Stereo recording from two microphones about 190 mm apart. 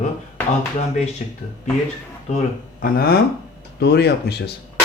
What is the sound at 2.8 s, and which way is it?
Speech, 50° left (ahead or behind).